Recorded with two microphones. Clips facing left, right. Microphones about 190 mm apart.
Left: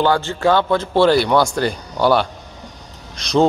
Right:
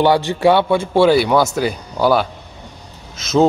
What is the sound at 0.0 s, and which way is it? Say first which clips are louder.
A man's voice: right 3 dB; 15° right (ahead or behind).